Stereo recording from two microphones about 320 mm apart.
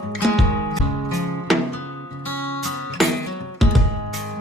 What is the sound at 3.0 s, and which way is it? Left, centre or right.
Music, centre.